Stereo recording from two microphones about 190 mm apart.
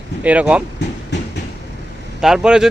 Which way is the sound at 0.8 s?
65° left (ahead or behind).